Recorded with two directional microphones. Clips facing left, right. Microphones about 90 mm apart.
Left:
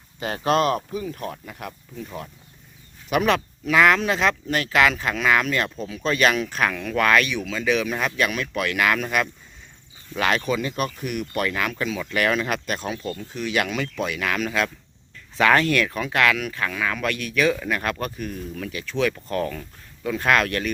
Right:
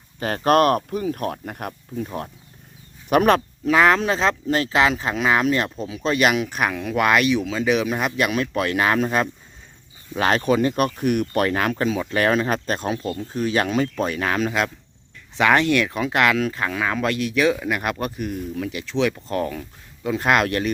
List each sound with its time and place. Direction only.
0.2 s speech: 45° right (ahead or behind)
3.7 s speech: 30° right (ahead or behind)